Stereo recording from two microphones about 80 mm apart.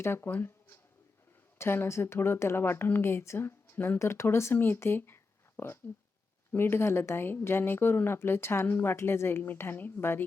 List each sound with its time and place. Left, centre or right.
0.0 s a woman's voice: left